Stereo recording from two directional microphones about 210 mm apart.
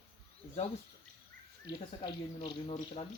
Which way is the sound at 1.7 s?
50° right (ahead or behind).